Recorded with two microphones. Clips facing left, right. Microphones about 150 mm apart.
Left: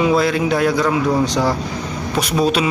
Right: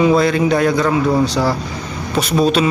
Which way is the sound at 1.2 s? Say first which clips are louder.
Right 1 dB; 20° left (ahead or behind).